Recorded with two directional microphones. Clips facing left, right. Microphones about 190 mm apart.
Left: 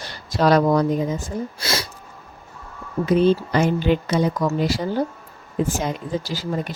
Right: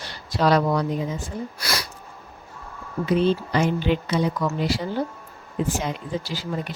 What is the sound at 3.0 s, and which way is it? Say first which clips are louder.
Speech: left 4 dB; 45° left (ahead or behind).